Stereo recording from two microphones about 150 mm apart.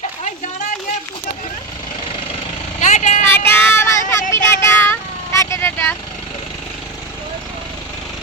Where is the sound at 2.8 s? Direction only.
55° left (ahead or behind).